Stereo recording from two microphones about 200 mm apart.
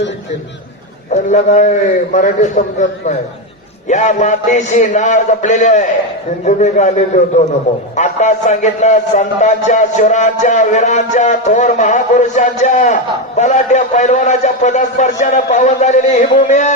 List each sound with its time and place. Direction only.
1.1 s a man's voice: 35° left (ahead or behind)